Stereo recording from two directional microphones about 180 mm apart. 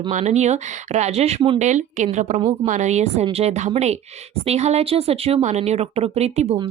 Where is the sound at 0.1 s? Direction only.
40° right (ahead or behind).